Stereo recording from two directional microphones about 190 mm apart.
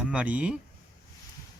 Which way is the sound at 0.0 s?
5° right (ahead or behind).